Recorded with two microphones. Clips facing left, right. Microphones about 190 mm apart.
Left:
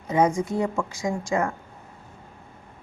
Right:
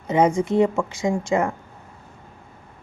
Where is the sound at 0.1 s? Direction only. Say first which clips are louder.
Right 3 dB; 25° right (ahead or behind).